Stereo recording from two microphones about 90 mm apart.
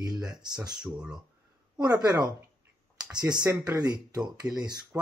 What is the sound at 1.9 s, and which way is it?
Speech, 45° right (ahead or behind).